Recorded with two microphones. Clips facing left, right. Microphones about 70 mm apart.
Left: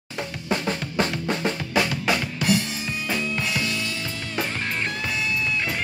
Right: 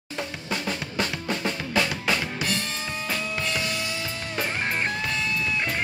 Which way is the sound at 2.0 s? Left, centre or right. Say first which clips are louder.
Left 3 dB; centre.